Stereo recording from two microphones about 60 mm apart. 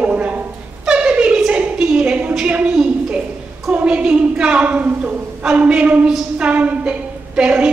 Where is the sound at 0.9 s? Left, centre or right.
Centre.